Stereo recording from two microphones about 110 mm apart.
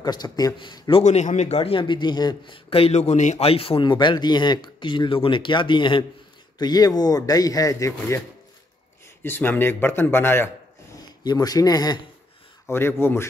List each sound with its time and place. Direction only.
0.0 s speech: 40° left (ahead or behind)
1.0 s a man's voice: 90° left; by 3.8 s 60° left (ahead or behind)
3.8 s speech: 45° left (ahead or behind)
6.6 s speech: 35° left (ahead or behind)
9.2 s speech: 20° left (ahead or behind)
11.2 s speech: 35° left (ahead or behind)
12.6 s speech: 20° left (ahead or behind)